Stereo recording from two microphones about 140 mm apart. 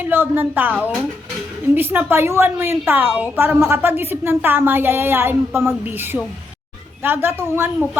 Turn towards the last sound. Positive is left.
turn(degrees=-15)  # may be behind; listen again after turning